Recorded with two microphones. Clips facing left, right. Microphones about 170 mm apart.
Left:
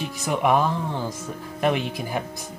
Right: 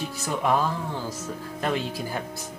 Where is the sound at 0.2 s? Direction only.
15° left (ahead or behind).